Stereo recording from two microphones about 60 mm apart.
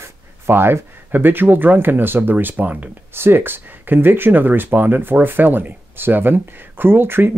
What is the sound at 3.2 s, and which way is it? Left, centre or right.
Speech, right.